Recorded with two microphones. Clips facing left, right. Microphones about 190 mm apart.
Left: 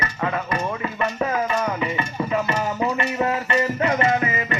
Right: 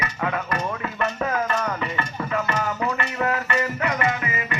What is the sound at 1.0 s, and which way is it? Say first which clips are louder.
Music: left 1 dB; 5° left (ahead or behind).